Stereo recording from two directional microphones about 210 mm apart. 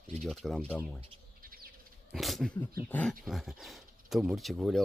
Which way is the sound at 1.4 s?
45° right (ahead or behind).